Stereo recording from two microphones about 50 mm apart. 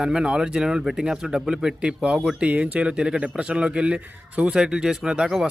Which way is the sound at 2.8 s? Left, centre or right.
Centre.